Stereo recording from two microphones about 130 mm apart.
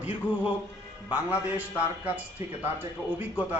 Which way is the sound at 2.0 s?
10° right (ahead or behind).